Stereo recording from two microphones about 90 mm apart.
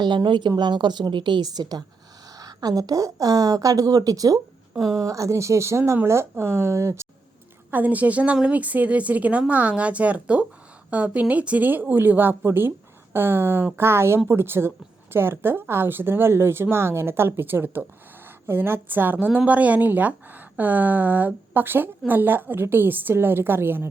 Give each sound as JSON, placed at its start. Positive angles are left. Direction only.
{"t": 0.3, "sound": "a woman's voice", "side_deg": -55}
{"t": 7.7, "sound": "a woman's voice", "side_deg": -20}